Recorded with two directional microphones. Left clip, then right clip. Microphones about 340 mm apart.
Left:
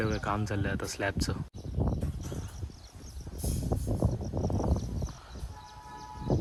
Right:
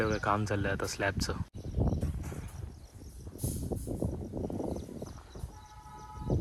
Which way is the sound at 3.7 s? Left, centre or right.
Right.